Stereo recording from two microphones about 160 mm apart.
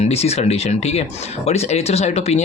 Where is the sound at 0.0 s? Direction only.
40° left (ahead or behind).